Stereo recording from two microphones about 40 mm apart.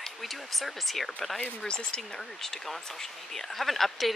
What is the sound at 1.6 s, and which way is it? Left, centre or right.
Speech, left.